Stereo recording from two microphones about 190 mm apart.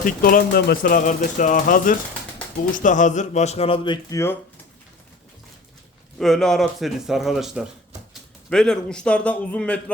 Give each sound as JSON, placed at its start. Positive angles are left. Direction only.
{"t": 0.0, "sound": "speech", "side_deg": 50}
{"t": 4.1, "sound": "speech", "side_deg": 15}
{"t": 6.1, "sound": "speech", "side_deg": 0}